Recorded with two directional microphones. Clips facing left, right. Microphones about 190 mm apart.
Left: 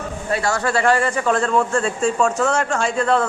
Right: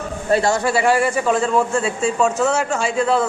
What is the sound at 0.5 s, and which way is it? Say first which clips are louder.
A man's voice: right 1 dB; 10° right (ahead or behind).